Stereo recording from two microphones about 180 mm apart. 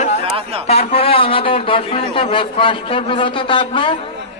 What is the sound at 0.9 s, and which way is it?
A man's voice, 30° left (ahead or behind).